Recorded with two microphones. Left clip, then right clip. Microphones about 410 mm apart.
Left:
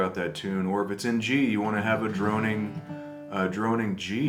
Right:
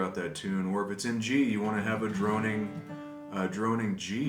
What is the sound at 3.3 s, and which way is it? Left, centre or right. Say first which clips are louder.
Speech: left 4 dB; centre.